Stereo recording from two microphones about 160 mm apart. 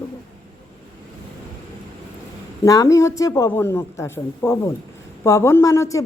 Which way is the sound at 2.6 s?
20° left (ahead or behind).